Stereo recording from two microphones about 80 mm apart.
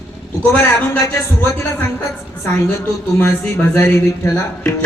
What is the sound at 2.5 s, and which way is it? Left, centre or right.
Music, left.